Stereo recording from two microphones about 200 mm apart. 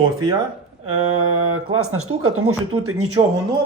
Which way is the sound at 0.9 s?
90° right.